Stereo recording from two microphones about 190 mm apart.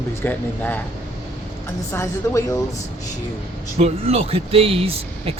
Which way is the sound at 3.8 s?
30° right (ahead or behind).